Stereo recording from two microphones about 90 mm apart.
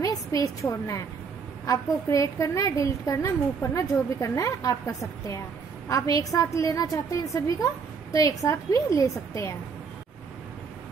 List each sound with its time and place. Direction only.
0.0 s a woman's voice: 40° left (ahead or behind)
5.9 s a woman's voice: 40° left (ahead or behind)